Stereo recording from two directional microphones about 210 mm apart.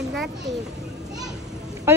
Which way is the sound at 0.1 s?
Centre (ahead or behind).